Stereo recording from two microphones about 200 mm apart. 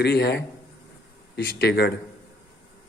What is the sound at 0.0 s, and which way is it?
A man's voice, 55° left (ahead or behind).